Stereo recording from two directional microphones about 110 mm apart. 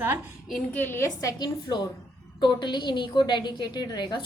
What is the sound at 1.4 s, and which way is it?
A woman's voice, 40° left (ahead or behind).